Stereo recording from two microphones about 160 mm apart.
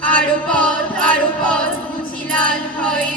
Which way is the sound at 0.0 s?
5° left (ahead or behind).